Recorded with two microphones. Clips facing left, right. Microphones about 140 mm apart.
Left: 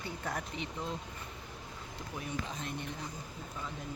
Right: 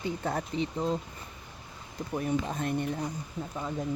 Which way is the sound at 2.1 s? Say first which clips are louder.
Right 10 dB; 50° right (ahead or behind).